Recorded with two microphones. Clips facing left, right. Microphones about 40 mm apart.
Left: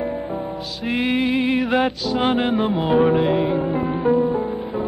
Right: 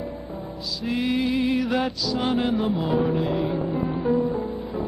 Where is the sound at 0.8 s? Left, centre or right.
Left.